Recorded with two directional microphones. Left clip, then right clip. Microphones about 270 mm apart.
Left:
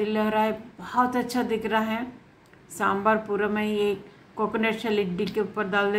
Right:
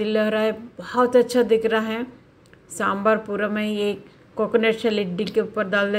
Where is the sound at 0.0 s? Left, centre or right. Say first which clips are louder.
Right 3 dB; centre.